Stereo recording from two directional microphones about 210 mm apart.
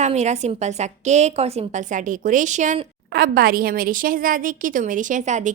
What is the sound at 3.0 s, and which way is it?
A woman's voice, 45° right (ahead or behind).